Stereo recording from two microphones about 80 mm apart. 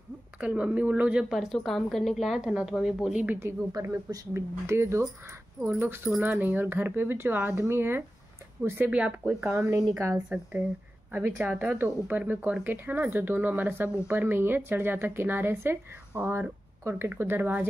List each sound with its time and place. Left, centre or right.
0.4 s speech: centre
1.3 s a woman's voice: centre
3.3 s speech: right
3.7 s speech: right; by 9.4 s centre
9.4 s speech: right
9.8 s a woman's voice: right
11.1 s speech: right